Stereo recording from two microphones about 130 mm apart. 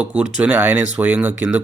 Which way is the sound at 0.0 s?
10° right (ahead or behind).